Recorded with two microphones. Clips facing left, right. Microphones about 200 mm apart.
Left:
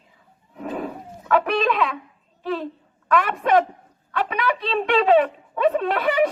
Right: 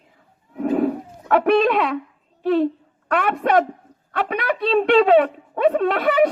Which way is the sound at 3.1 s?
60° right (ahead or behind).